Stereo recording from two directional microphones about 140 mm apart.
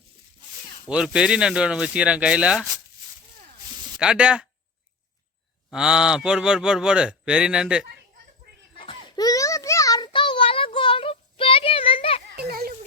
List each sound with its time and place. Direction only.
0.5 s speech: 5° right (ahead or behind)
3.8 s speech: 5° right (ahead or behind)
5.7 s speech: 5° right (ahead or behind)
8.8 s baby cry: 40° left (ahead or behind)
9.2 s a sound: 25° left (ahead or behind); by 12.2 s 40° left (ahead or behind)
12.5 s a sound: 90° right